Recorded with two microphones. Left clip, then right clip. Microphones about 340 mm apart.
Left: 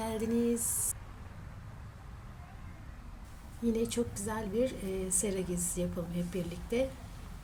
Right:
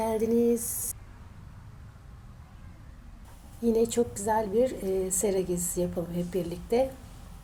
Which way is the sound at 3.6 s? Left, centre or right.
Centre.